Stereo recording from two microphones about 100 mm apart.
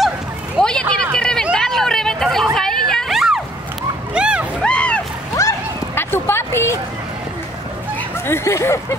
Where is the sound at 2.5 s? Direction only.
5° left (ahead or behind).